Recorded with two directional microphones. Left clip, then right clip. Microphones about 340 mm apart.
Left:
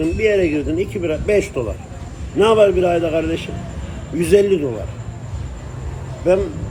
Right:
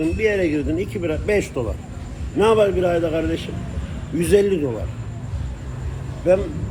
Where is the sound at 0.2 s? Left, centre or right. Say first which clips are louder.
Left 5 dB; centre.